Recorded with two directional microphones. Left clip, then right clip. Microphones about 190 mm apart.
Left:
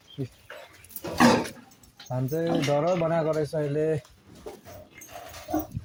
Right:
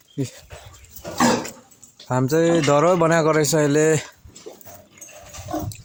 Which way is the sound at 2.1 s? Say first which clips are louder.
Right 10 dB; 55° right (ahead or behind).